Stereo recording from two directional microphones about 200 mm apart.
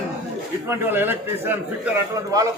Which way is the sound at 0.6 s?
10° right (ahead or behind).